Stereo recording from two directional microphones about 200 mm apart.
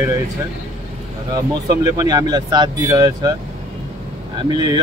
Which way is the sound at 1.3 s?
20° right (ahead or behind).